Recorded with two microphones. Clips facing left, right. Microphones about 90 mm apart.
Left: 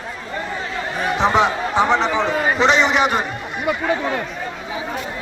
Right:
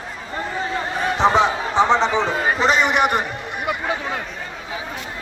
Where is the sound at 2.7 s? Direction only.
55° right (ahead or behind).